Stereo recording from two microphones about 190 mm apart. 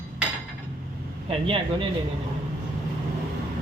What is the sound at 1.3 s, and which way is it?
Speech, 30° right (ahead or behind).